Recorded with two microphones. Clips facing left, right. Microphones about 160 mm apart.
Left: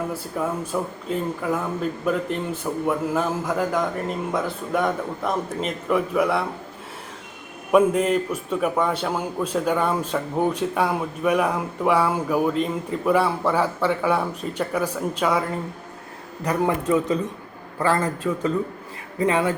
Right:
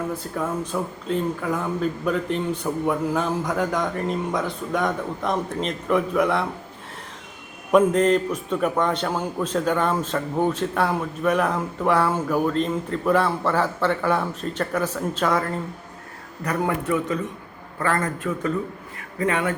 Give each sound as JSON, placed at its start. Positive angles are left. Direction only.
{"t": 0.1, "sound": "speech", "side_deg": 5}
{"t": 7.7, "sound": "a man's voice", "side_deg": 5}
{"t": 17.8, "sound": "a man's voice", "side_deg": 30}